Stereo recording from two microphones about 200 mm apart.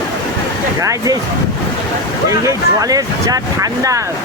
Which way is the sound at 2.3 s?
15° right (ahead or behind).